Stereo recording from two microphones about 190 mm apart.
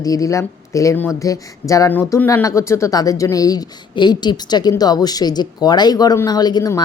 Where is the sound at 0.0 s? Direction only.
20° left (ahead or behind).